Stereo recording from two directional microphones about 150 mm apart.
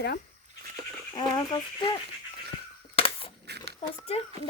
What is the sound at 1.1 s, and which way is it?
Speech, 30° left (ahead or behind).